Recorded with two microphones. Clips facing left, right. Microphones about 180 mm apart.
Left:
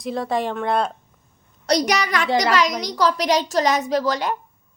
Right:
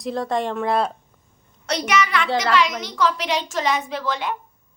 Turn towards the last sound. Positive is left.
turn(degrees=40)  # may be behind; listen again after turning